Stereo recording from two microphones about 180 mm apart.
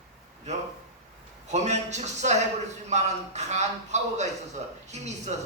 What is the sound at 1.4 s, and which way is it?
Speech, 40° right (ahead or behind).